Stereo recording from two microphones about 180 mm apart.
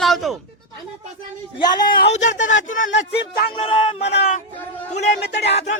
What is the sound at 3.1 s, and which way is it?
Music, 60° left (ahead or behind).